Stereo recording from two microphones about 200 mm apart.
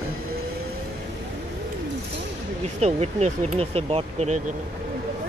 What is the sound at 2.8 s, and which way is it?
Speech, 35° right (ahead or behind).